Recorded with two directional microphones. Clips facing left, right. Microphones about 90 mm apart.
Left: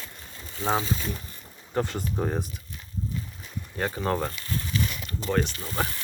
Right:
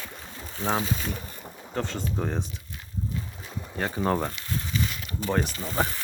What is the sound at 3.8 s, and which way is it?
Speech, 5° right (ahead or behind).